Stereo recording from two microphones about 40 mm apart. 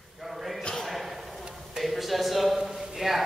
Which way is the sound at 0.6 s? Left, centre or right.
Centre.